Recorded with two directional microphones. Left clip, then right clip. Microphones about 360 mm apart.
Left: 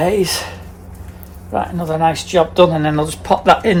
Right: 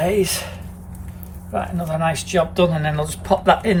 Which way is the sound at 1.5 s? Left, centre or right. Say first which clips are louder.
Left 5 dB; centre.